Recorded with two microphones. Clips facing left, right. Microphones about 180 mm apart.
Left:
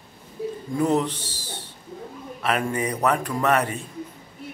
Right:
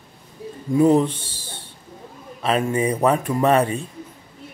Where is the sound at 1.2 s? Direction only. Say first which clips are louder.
Left 2 dB; 55° right (ahead or behind).